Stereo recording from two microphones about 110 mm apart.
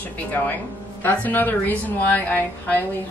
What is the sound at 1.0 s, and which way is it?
A woman's voice, 15° left (ahead or behind).